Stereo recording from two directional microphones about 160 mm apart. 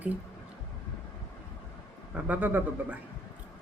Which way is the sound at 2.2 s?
10° right (ahead or behind).